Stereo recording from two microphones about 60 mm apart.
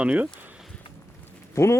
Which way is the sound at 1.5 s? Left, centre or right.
Left.